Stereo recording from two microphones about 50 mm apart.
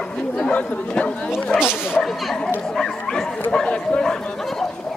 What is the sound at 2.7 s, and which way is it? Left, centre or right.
Dog, centre.